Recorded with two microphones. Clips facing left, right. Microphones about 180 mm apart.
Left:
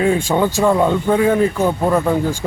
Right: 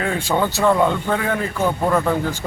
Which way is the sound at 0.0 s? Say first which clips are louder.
Left 5 dB; 15° left (ahead or behind).